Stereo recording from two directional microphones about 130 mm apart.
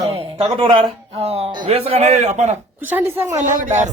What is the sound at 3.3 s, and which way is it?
Speech, 70° right (ahead or behind).